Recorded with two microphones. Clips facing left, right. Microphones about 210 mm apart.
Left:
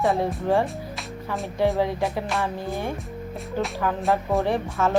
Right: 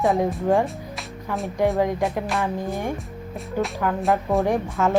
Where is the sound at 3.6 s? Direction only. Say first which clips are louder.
Right 2 dB; centre (ahead or behind).